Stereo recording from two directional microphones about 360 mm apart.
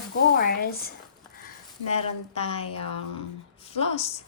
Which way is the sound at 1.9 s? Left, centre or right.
Centre.